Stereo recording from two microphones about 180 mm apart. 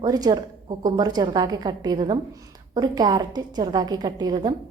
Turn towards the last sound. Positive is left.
turn(degrees=-25)  # may be behind; listen again after turning